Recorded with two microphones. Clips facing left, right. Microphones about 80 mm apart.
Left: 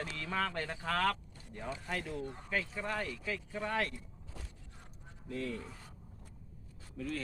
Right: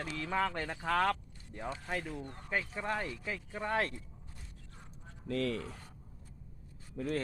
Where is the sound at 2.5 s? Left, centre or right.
Right.